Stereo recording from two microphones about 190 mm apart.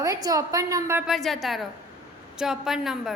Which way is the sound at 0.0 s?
20° right (ahead or behind).